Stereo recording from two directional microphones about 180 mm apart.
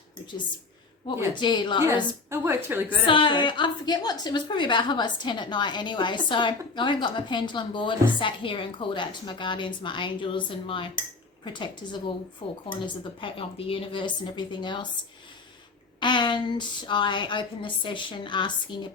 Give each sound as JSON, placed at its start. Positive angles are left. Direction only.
{"t": 1.4, "sound": "a woman's voice", "side_deg": 25}
{"t": 2.3, "sound": "a woman's voice", "side_deg": -10}
{"t": 3.1, "sound": "a woman's voice", "side_deg": 25}
{"t": 16.0, "sound": "a woman's voice", "side_deg": 25}